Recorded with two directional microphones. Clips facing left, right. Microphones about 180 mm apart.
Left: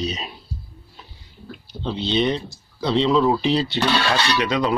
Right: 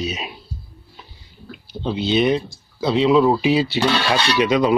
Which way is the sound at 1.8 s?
5° right (ahead or behind).